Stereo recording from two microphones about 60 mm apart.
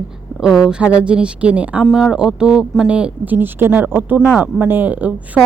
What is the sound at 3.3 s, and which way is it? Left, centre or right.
Speech, right.